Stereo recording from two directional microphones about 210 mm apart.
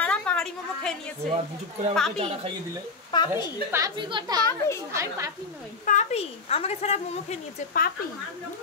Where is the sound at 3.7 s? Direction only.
15° right (ahead or behind).